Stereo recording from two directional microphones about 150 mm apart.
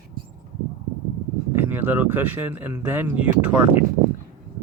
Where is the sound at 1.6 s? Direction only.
15° right (ahead or behind).